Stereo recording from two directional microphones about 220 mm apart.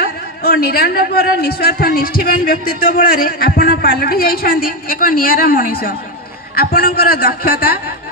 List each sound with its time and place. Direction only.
0.0 s a man's voice: 45° left (ahead or behind)